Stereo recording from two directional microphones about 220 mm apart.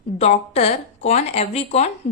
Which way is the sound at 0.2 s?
30° left (ahead or behind).